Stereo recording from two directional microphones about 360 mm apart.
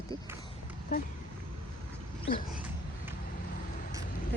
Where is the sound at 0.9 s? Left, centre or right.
Left.